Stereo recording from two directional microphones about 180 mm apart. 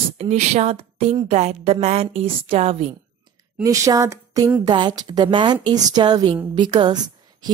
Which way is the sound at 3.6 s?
20° right (ahead or behind).